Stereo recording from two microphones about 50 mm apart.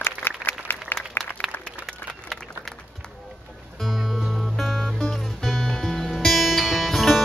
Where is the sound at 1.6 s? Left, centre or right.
Centre.